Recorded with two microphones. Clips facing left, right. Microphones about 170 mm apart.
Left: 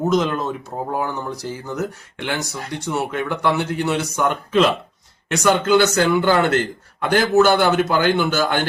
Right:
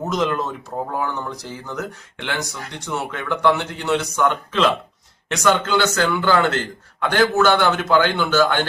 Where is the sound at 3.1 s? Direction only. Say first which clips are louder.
Right 5 dB; 5° left (ahead or behind).